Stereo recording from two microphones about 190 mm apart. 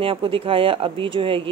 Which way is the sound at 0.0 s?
30° right (ahead or behind).